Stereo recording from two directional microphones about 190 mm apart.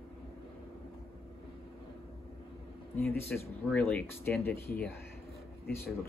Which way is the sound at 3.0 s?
10° left (ahead or behind).